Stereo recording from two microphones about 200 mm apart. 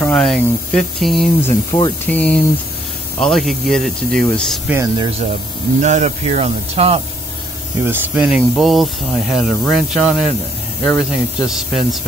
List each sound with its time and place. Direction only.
0.0 s speech: 5° left (ahead or behind)
1.7 s speech: 25° left (ahead or behind)
2.0 s speech: 5° left (ahead or behind)
4.7 s speech: 25° right (ahead or behind)
5.8 s speech: 35° right (ahead or behind)
7.8 s speech: 10° right (ahead or behind)